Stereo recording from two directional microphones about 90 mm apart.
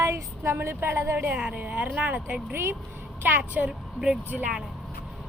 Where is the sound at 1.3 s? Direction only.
15° right (ahead or behind).